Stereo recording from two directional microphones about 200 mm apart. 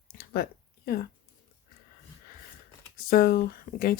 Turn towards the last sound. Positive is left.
turn(degrees=45)  # may be behind; listen again after turning